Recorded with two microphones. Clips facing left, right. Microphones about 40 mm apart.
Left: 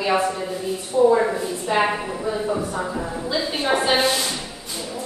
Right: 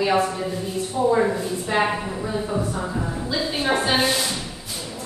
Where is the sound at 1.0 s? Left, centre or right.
Centre.